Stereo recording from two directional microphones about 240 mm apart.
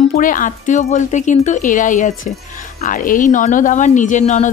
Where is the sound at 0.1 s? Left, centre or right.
Left.